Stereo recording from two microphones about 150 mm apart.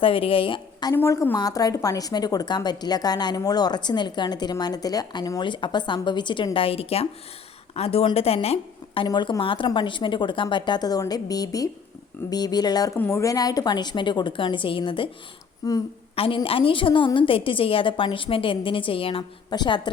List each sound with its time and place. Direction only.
0.0 s speech: 35° left (ahead or behind)
0.9 s a woman's voice: 20° left (ahead or behind); by 8.5 s 40° left (ahead or behind)
9.0 s a woman's voice: 30° left (ahead or behind)
15.6 s a woman's voice: 25° left (ahead or behind)
16.1 s a woman's voice: 35° left (ahead or behind)